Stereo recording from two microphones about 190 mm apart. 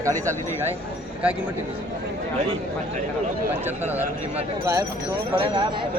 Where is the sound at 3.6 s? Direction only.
10° right (ahead or behind).